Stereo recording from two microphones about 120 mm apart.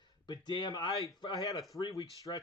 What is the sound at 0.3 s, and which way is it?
Speech, 40° left (ahead or behind).